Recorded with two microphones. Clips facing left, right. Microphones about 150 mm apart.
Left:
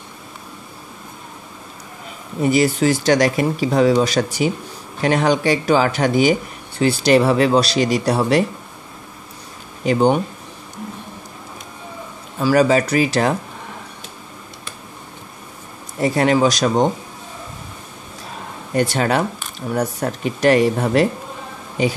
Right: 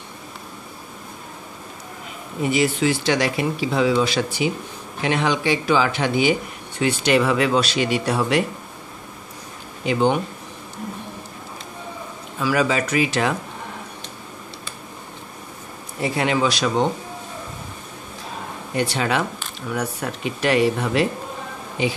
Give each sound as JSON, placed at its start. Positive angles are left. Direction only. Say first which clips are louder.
{"t": 2.4, "sound": "speech", "louder": "left 4 dB", "side_deg": 40}
{"t": 9.8, "sound": "speech", "louder": "left 4 dB", "side_deg": 40}
{"t": 12.4, "sound": "speech", "louder": "left 6 dB", "side_deg": 40}
{"t": 16.0, "sound": "speech", "louder": "left 5 dB", "side_deg": 40}
{"t": 18.8, "sound": "speech", "louder": "left 4 dB", "side_deg": 45}